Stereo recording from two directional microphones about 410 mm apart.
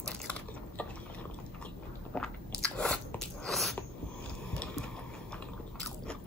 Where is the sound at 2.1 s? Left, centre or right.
Centre.